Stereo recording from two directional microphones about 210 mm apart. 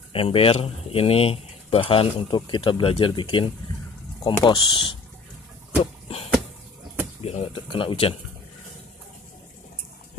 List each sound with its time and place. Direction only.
0.1 s speech: 25° left (ahead or behind)
7.2 s speech: 30° left (ahead or behind)